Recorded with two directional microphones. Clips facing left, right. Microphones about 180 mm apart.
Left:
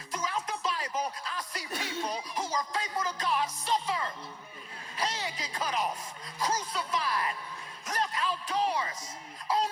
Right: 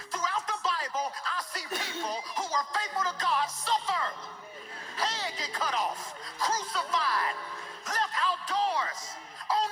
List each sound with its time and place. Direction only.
0.1 s music: 15° left (ahead or behind)
4.9 s speech: 15° left (ahead or behind)
7.9 s a sound: 15° left (ahead or behind)